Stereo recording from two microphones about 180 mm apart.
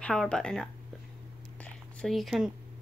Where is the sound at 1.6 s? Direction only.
5° left (ahead or behind).